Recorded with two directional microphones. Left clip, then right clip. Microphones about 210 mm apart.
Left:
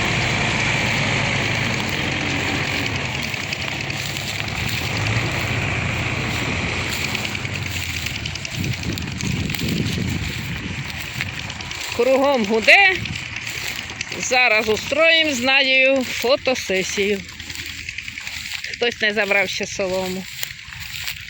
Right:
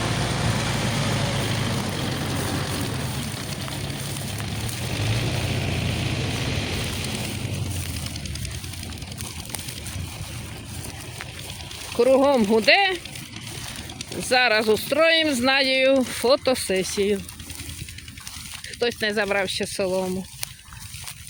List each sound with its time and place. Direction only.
0.0 s a sound: 35° left (ahead or behind)
5.0 s vehicle: 25° left (ahead or behind)
11.9 s speech: 10° right (ahead or behind)
14.2 s speech: 15° right (ahead or behind); by 17.2 s centre (ahead or behind)
18.8 s speech: centre (ahead or behind)